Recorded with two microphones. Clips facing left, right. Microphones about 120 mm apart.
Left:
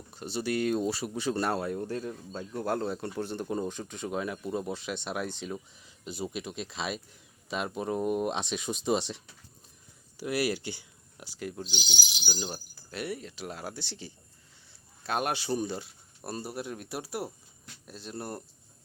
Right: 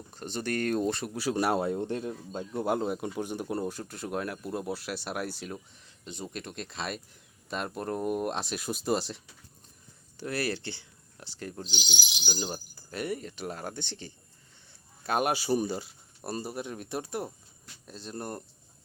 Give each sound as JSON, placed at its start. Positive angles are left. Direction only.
{"t": 0.1, "sound": "speech", "side_deg": 5}
{"t": 1.5, "sound": "speech", "side_deg": -25}
{"t": 10.2, "sound": "speech", "side_deg": 10}